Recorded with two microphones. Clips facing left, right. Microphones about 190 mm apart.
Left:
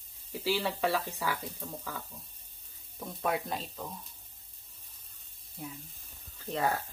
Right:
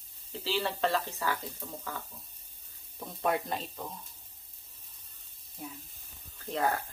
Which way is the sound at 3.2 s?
Centre (ahead or behind).